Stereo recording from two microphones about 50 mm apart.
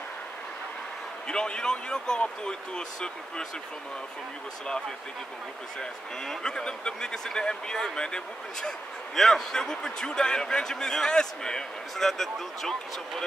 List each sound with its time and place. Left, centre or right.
1.2 s speech: centre
5.8 s speech: centre